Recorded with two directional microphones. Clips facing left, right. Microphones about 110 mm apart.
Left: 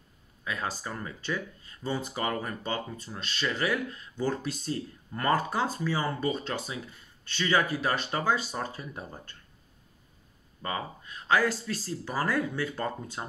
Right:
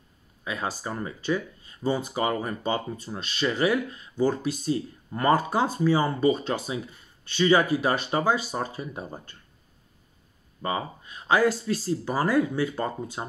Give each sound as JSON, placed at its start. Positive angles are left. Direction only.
{"t": 0.4, "sound": "speech", "side_deg": -15}
{"t": 10.6, "sound": "speech", "side_deg": -15}